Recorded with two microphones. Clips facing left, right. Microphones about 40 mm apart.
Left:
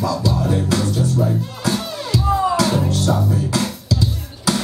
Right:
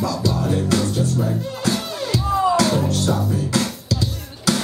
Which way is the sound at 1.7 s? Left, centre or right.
Centre.